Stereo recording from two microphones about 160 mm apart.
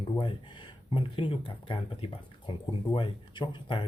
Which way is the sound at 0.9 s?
30° left (ahead or behind).